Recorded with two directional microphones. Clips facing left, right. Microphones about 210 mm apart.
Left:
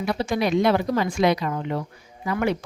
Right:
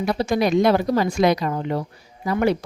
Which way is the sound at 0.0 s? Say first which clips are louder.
Right 3 dB; 40° right (ahead or behind).